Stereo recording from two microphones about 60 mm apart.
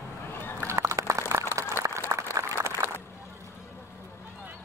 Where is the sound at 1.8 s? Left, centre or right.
Right.